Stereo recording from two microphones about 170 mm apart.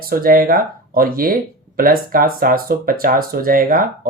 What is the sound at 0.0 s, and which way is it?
Speech, 60° right (ahead or behind).